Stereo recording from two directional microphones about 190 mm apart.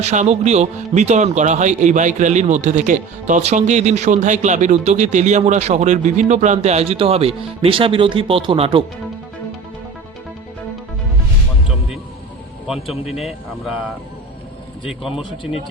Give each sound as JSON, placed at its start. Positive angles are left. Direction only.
{"t": 0.0, "sound": "speech", "side_deg": -35}
{"t": 12.6, "sound": "speech", "side_deg": -5}